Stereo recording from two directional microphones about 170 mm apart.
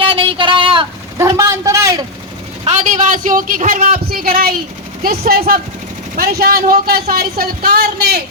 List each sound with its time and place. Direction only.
0.0 s a sound: 30° right (ahead or behind)
1.2 s a man's voice: 15° right (ahead or behind)
2.6 s a man's voice: 45° right (ahead or behind); by 8.2 s 65° right (ahead or behind)